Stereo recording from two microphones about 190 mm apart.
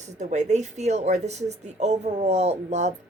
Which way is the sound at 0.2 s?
40° right (ahead or behind).